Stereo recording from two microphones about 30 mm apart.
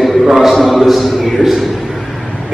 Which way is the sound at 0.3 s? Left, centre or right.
Centre.